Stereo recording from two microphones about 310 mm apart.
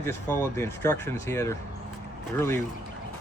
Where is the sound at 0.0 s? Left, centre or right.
Centre.